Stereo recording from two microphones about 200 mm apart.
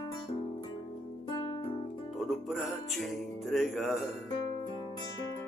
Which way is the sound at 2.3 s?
Centre (ahead or behind).